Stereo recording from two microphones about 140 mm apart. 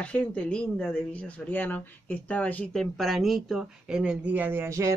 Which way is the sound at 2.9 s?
Centre (ahead or behind).